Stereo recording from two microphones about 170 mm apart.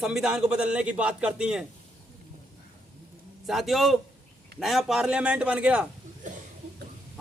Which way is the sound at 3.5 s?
Centre (ahead or behind).